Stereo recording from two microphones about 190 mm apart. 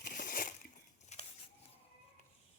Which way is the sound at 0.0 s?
50° left (ahead or behind).